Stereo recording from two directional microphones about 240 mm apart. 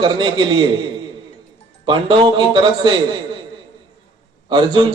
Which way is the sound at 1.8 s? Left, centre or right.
Centre.